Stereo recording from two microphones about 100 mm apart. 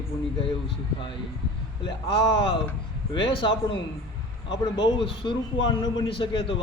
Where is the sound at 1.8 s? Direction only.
60° left (ahead or behind).